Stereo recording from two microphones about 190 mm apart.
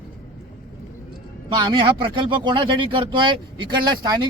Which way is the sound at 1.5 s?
25° right (ahead or behind).